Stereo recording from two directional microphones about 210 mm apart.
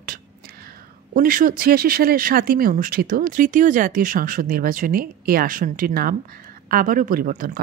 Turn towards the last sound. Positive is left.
turn(degrees=-40)  # may be behind; listen again after turning